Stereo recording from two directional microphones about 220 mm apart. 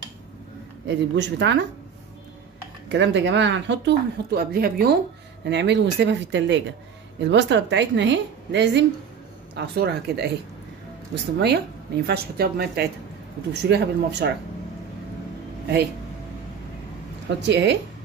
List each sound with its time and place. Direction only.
0.8 s speech: 50° right (ahead or behind)
2.9 s speech: 55° right (ahead or behind)
11.3 s speech: 50° right (ahead or behind)
17.3 s speech: 50° right (ahead or behind)